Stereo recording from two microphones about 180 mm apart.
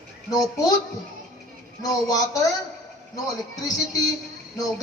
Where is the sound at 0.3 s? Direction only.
20° left (ahead or behind).